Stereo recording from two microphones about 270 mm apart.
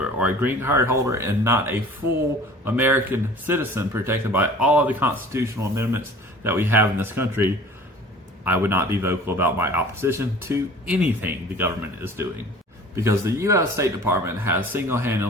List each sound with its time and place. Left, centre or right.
0.0 s speech: centre